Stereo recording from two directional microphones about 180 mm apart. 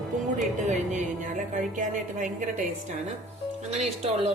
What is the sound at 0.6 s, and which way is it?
A woman's voice, 45° right (ahead or behind).